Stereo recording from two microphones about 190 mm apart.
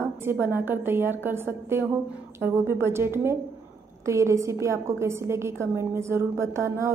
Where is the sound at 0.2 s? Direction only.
10° right (ahead or behind).